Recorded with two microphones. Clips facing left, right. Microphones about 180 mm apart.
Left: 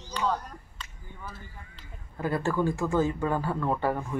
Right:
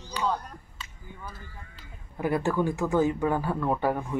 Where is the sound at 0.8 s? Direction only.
5° right (ahead or behind).